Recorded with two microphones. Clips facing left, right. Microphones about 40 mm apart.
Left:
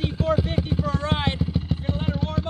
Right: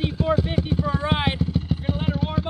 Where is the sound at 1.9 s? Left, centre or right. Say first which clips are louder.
Right 2 dB; centre.